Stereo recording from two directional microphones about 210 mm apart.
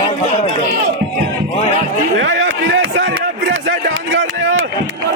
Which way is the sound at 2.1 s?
65° right (ahead or behind).